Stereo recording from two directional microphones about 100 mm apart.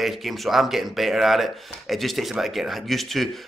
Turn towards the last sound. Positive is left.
turn(degrees=0)  # may be behind; listen again after turning